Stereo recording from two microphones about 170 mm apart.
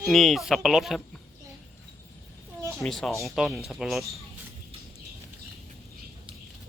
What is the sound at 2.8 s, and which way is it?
Speech, centre (ahead or behind).